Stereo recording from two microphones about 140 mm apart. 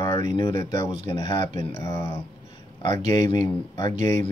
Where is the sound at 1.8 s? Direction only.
20° left (ahead or behind).